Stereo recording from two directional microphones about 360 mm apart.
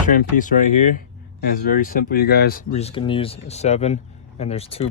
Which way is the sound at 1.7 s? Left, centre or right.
Left.